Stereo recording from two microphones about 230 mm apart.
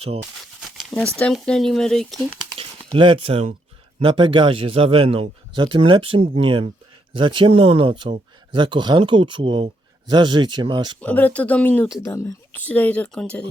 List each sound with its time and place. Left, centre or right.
0.8 s zipper: centre
1.2 s speech: centre
2.6 s speech: right
11.0 s speech: centre